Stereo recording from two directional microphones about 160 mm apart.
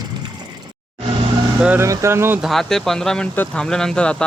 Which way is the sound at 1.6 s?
10° right (ahead or behind).